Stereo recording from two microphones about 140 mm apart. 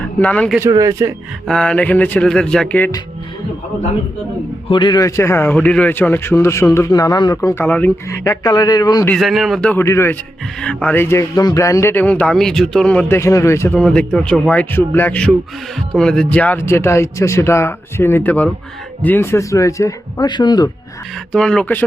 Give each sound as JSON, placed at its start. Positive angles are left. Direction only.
{"t": 0.0, "sound": "speech", "side_deg": 10}
{"t": 0.7, "sound": "a man's voice", "side_deg": -25}
{"t": 1.5, "sound": "speech", "side_deg": 5}
{"t": 4.7, "sound": "a man's voice", "side_deg": 30}
{"t": 7.6, "sound": "a man's voice", "side_deg": 10}
{"t": 9.0, "sound": "speech", "side_deg": 0}
{"t": 9.8, "sound": "a man's voice", "side_deg": 20}
{"t": 10.6, "sound": "speech", "side_deg": 10}
{"t": 13.7, "sound": "a man's voice", "side_deg": 5}
{"t": 21.3, "sound": "speech", "side_deg": 5}